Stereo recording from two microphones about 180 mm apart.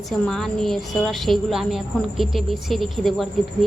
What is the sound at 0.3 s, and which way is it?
A woman's voice, centre (ahead or behind).